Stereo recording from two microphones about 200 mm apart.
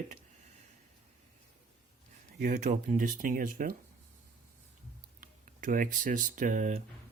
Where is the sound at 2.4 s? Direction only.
40° right (ahead or behind).